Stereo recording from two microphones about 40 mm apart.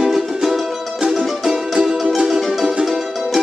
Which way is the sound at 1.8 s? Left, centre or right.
Centre.